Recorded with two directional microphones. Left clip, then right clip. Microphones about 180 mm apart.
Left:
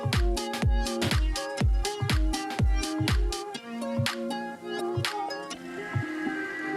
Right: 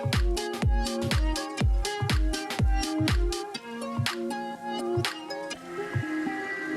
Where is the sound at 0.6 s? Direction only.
Centre (ahead or behind).